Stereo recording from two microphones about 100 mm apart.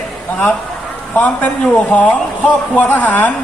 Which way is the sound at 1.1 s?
15° left (ahead or behind).